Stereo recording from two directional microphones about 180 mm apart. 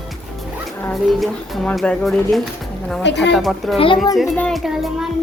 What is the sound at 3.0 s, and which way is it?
Speech, 75° left (ahead or behind).